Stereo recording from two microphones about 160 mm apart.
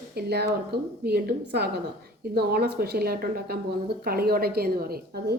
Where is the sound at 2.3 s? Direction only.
80° right.